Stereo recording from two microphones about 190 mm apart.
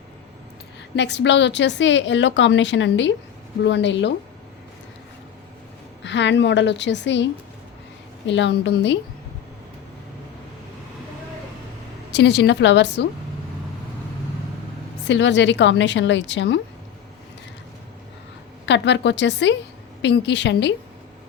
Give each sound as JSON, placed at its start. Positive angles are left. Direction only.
{"t": 0.9, "sound": "a woman's voice", "side_deg": 65}
{"t": 6.0, "sound": "a woman's voice", "side_deg": 70}
{"t": 8.3, "sound": "a woman's voice", "side_deg": 70}
{"t": 12.1, "sound": "a woman's voice", "side_deg": 65}
{"t": 15.0, "sound": "a woman's voice", "side_deg": 70}
{"t": 18.6, "sound": "a woman's voice", "side_deg": 70}